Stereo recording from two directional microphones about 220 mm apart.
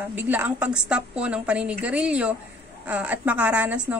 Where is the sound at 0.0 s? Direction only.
10° right (ahead or behind).